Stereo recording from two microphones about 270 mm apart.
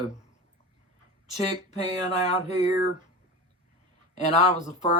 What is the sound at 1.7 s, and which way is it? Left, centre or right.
Speech, left.